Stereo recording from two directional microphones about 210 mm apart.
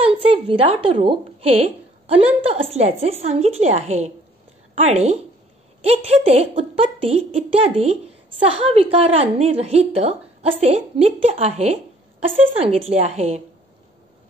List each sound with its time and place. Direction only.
0.0 s a woman's voice: 25° right (ahead or behind)